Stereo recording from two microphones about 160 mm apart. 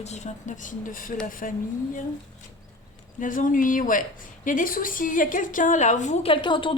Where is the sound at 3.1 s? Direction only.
55° left (ahead or behind); by 6.7 s 30° left (ahead or behind).